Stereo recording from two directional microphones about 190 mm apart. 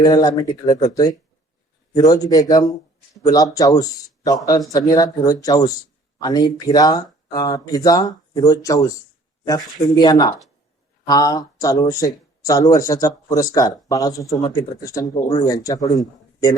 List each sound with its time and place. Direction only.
0.0 s speech: 20° left (ahead or behind)
4.9 s speech: 20° left (ahead or behind)
9.9 s speech: 20° left (ahead or behind)